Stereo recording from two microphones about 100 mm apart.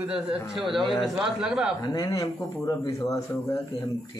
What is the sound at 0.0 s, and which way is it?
A man's voice, 10° right (ahead or behind).